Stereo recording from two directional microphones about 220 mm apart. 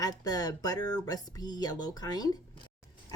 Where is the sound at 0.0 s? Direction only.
15° left (ahead or behind).